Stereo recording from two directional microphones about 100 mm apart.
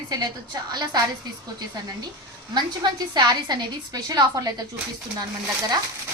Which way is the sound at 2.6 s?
45° right (ahead or behind).